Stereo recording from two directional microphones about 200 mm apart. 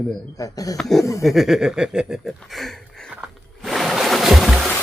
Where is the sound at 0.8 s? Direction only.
Centre (ahead or behind).